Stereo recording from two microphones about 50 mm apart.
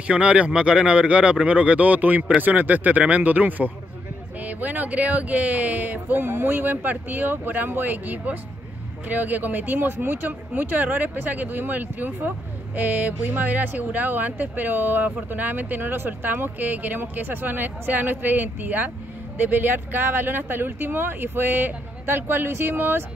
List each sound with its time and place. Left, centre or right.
0.0 s speech: right
6.2 s speech: right